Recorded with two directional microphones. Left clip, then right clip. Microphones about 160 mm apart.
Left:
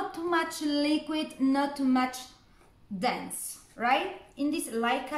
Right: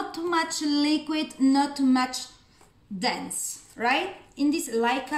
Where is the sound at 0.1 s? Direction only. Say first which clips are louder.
Right 6 dB; 15° left (ahead or behind).